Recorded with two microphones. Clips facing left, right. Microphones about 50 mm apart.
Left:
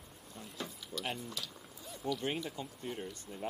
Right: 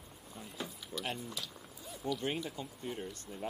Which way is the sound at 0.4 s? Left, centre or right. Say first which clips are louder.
Even; centre.